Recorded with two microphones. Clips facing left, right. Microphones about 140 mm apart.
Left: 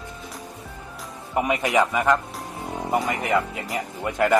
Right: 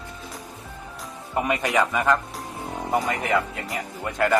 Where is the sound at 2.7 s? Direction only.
5° left (ahead or behind).